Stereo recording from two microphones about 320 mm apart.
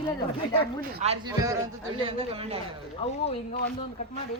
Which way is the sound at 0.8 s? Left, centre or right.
Centre.